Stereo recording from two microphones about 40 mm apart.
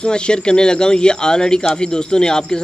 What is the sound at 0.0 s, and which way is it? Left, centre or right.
Speech, left.